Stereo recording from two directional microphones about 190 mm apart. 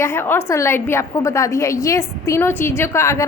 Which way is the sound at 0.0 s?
10° left (ahead or behind).